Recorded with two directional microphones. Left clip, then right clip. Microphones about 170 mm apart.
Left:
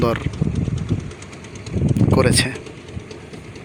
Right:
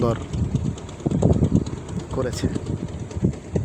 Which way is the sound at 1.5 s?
65° right (ahead or behind).